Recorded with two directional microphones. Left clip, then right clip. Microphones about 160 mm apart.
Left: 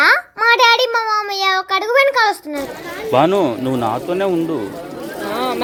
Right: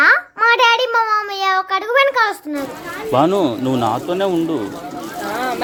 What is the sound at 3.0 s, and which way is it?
A child's voice, 10° right (ahead or behind).